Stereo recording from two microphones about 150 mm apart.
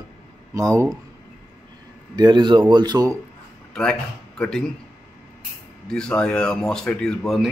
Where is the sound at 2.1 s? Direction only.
30° right (ahead or behind).